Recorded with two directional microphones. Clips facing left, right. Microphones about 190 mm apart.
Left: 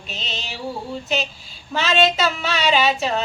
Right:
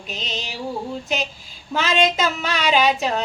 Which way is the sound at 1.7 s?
10° right (ahead or behind).